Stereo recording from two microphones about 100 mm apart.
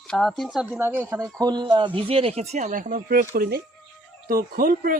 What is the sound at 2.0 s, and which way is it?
Speech, 70° right (ahead or behind).